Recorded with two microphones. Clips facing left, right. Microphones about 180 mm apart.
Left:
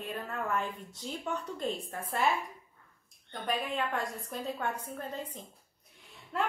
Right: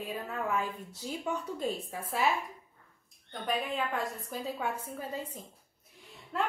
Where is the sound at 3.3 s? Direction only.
Centre (ahead or behind).